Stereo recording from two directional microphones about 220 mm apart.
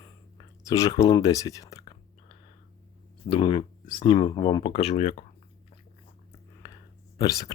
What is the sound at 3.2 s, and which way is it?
Speech, 25° left (ahead or behind).